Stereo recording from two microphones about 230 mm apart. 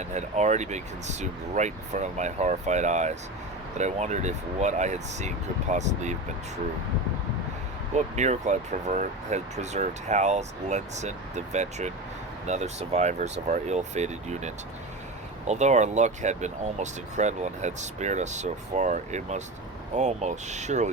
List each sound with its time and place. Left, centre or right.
0.0 s speech: right
7.9 s speech: right